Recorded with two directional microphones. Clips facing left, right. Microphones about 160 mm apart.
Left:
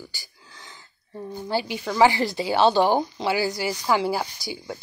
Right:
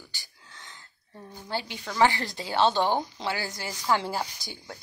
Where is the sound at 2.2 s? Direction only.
75° left (ahead or behind).